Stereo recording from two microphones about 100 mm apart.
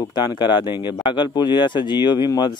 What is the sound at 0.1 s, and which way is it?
Speech, 50° left (ahead or behind).